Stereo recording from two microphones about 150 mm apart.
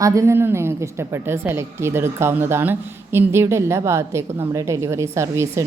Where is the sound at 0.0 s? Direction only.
20° right (ahead or behind).